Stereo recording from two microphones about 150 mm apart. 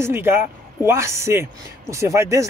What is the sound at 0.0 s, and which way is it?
Speech, 15° right (ahead or behind).